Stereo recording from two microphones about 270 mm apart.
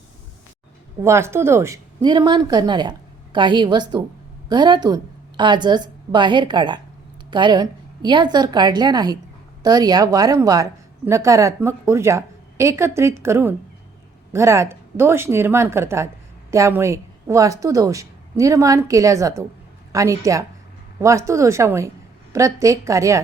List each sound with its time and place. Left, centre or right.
1.0 s a woman's voice: centre